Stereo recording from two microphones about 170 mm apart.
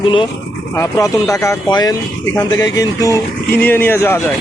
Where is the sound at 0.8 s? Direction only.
20° left (ahead or behind).